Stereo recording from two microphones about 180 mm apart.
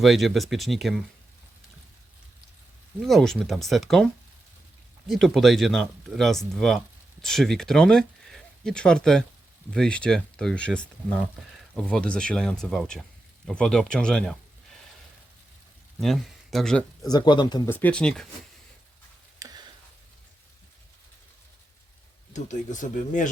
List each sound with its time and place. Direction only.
0.0 s speech: centre (ahead or behind)
3.0 s speech: centre (ahead or behind)
16.0 s speech: centre (ahead or behind)
17.1 s speech: 25° left (ahead or behind)
17.7 s speech: 10° left (ahead or behind)
19.4 s a sound: 20° right (ahead or behind)
22.3 s speech: 40° left (ahead or behind)